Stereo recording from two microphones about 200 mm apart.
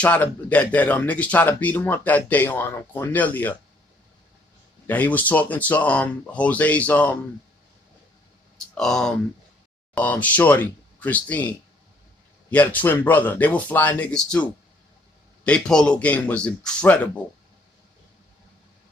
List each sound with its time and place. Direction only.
0.0 s speech: 5° left (ahead or behind)
4.9 s speech: 10° left (ahead or behind)
8.7 s a man's voice: centre (ahead or behind)